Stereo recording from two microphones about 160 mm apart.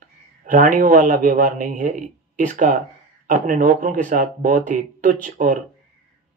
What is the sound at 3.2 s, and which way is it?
Speech, 55° right (ahead or behind).